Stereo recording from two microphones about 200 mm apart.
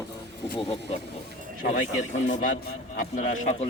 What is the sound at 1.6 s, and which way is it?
A man's voice, 45° left (ahead or behind).